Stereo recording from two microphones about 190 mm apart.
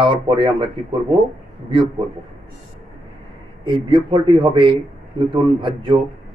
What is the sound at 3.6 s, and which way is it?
Speech, 25° right (ahead or behind).